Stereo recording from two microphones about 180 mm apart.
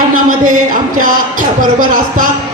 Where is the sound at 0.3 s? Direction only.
50° right (ahead or behind).